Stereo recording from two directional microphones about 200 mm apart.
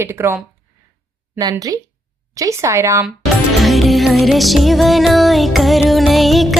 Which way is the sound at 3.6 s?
Centre (ahead or behind).